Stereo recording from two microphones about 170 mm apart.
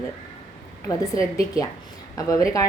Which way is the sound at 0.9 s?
20° left (ahead or behind).